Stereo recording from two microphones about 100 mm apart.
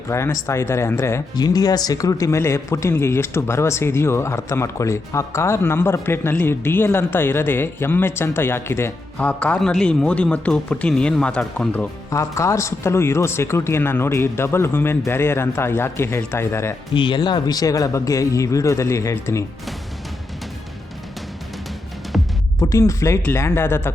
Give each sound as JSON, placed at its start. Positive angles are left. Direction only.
{"t": 0.1, "sound": "a man's voice", "side_deg": 30}
{"t": 1.4, "sound": "a man's voice", "side_deg": 40}
{"t": 9.1, "sound": "speech", "side_deg": 15}
{"t": 12.1, "sound": "a man's voice", "side_deg": 30}
{"t": 16.9, "sound": "speech", "side_deg": 55}
{"t": 22.1, "sound": "music", "side_deg": 0}
{"t": 22.6, "sound": "a man's voice", "side_deg": 30}